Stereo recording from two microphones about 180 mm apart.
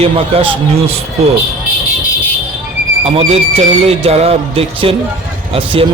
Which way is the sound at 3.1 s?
30° right (ahead or behind).